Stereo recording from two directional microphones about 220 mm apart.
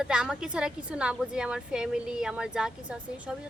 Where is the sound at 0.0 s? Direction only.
5° right (ahead or behind).